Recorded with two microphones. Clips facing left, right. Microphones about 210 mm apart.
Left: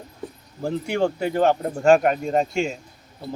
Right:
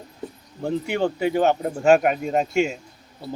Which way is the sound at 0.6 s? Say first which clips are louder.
Even; centre (ahead or behind).